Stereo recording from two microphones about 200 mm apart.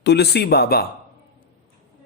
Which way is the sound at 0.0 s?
55° left (ahead or behind).